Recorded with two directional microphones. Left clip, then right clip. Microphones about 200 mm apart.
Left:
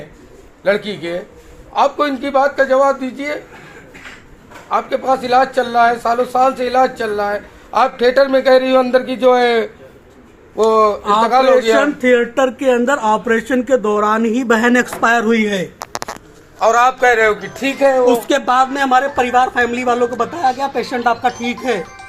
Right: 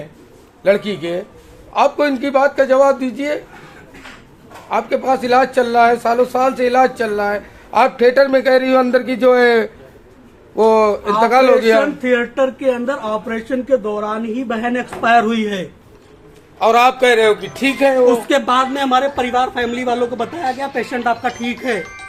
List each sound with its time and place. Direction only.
0.6 s speech: 30° right (ahead or behind)
4.7 s speech: 30° right (ahead or behind)
11.8 s speech: 40° left (ahead or behind); by 15.2 s 55° left (ahead or behind)
16.6 s a man's voice: 25° right (ahead or behind)
18.0 s speech: centre (ahead or behind)